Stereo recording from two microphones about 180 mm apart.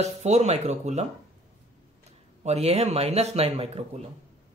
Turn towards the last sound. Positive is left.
turn(degrees=-35)  # may be behind; listen again after turning